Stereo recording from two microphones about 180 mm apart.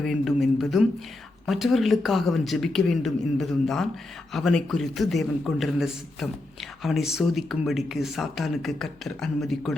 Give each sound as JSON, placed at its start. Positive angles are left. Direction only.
{"t": 0.0, "sound": "a man's voice", "side_deg": 0}